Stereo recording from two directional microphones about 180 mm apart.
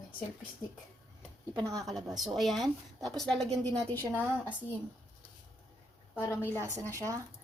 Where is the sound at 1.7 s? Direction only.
Centre (ahead or behind).